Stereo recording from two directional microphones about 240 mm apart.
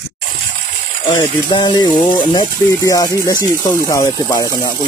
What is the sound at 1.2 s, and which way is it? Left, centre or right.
Speech, centre.